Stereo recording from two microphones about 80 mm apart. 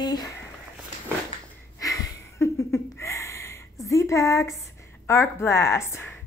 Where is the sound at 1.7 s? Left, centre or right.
Left.